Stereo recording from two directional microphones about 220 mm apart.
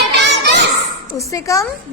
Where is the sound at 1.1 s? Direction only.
15° left (ahead or behind).